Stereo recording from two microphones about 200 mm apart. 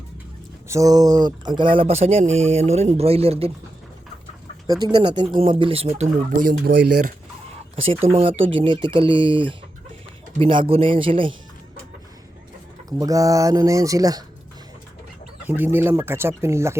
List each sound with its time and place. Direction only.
0.7 s speech: 15° right (ahead or behind)
4.8 s speech: 20° right (ahead or behind)
6.3 s speech: 50° right (ahead or behind)
6.7 s speech: 60° right (ahead or behind)
8.1 s speech: 30° right (ahead or behind)
13.0 s speech: 15° right (ahead or behind)
15.4 s speech: 10° right (ahead or behind)